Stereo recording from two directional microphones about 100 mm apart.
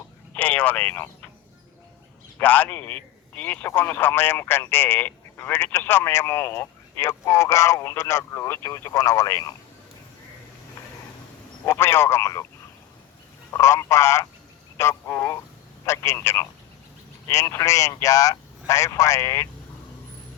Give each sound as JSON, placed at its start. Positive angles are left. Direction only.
{"t": 0.3, "sound": "speech", "side_deg": 15}
{"t": 2.4, "sound": "a man's voice", "side_deg": 15}
{"t": 11.6, "sound": "a man's voice", "side_deg": 25}
{"t": 13.5, "sound": "a man's voice", "side_deg": 30}